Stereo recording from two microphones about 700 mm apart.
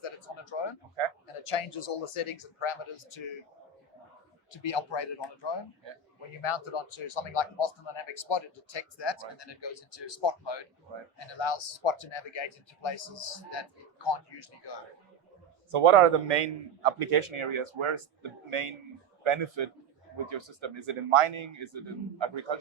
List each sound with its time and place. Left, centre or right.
0.5 s a sound: left
1.0 s a man's voice: right
1.5 s speech: left
4.5 s speech: left
15.7 s a man's voice: right